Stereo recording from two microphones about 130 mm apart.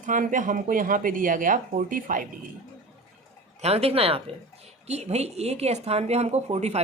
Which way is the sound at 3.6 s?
50° right (ahead or behind).